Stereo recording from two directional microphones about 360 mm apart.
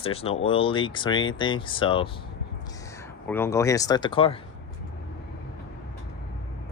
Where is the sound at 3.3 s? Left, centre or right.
Centre.